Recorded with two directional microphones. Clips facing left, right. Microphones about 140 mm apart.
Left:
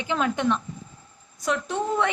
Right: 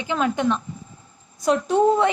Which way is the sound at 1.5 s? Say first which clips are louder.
Right 8 dB; 30° right (ahead or behind).